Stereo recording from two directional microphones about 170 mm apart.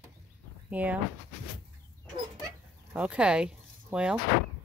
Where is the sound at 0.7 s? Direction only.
10° right (ahead or behind).